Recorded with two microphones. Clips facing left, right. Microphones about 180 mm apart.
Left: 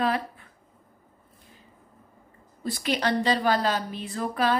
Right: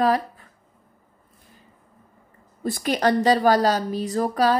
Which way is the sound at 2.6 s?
45° right (ahead or behind).